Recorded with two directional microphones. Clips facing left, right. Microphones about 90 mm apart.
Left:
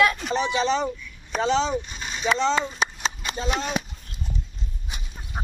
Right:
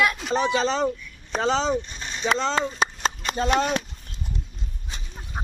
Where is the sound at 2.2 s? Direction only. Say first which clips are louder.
Left 1 dB; 40° right (ahead or behind).